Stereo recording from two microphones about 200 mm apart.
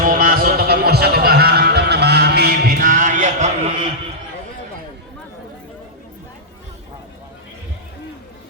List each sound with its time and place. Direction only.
0.0 s music: 45° right (ahead or behind)